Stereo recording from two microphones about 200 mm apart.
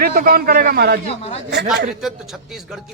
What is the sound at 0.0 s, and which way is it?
Speech, 45° right (ahead or behind).